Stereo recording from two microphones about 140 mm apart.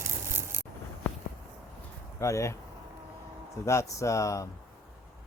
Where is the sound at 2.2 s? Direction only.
20° left (ahead or behind).